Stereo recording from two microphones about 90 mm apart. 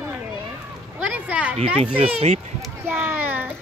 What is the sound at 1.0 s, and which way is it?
Speech, 15° right (ahead or behind).